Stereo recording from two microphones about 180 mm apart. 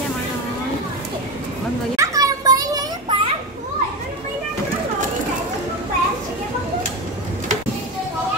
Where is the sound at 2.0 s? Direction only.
20° right (ahead or behind).